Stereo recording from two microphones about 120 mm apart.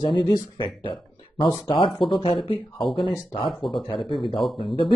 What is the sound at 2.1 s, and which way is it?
Speech, 45° left (ahead or behind).